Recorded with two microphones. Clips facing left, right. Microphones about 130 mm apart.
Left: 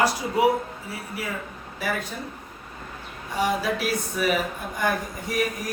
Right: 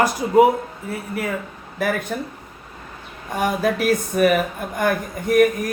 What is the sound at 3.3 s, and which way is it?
A woman's voice, 50° right (ahead or behind).